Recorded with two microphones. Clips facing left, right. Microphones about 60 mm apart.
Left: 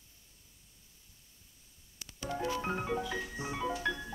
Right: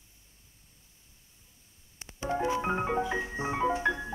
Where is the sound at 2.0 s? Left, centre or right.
Right.